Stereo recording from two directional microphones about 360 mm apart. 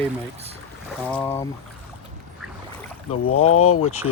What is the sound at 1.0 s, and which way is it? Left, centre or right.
Speech, centre.